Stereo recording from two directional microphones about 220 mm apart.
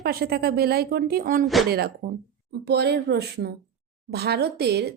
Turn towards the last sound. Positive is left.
turn(degrees=-45)  # may be behind; listen again after turning